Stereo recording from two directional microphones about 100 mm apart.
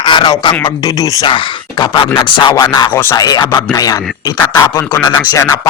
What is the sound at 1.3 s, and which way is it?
Speech, 55° left (ahead or behind).